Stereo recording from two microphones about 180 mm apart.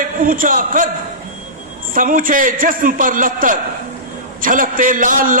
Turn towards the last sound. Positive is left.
turn(degrees=-50)  # may be behind; listen again after turning